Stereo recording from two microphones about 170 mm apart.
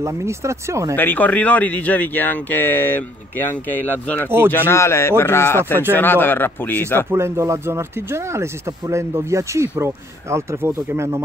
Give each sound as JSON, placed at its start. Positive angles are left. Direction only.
{"t": 0.0, "sound": "speech", "side_deg": -15}
{"t": 0.9, "sound": "speech", "side_deg": 10}
{"t": 7.1, "sound": "speech", "side_deg": -15}